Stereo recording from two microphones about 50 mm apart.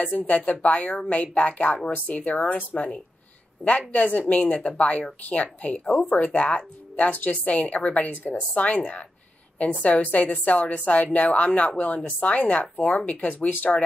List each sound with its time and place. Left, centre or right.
0.0 s speech: left